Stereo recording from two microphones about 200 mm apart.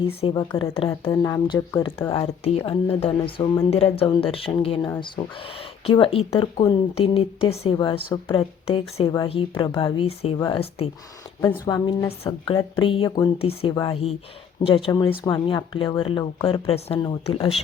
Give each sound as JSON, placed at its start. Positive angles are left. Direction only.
{"t": 0.2, "sound": "speech", "side_deg": 25}
{"t": 13.4, "sound": "speech", "side_deg": 30}